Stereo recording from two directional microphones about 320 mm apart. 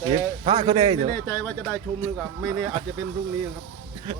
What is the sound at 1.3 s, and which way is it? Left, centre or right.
Speech, centre.